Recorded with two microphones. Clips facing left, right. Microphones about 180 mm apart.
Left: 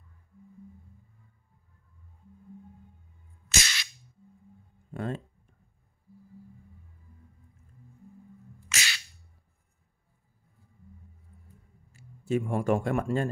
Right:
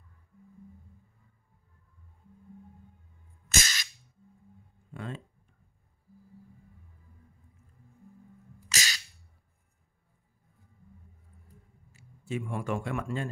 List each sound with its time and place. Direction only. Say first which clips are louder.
3.4 s music: even; 45° right (ahead or behind)
4.9 s speech: left 6 dB; 45° left (ahead or behind)
8.6 s a sound: even; 40° right (ahead or behind)
11.9 s speech: left 7 dB; 45° left (ahead or behind)